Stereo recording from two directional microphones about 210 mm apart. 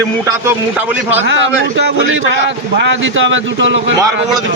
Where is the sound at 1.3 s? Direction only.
60° right (ahead or behind).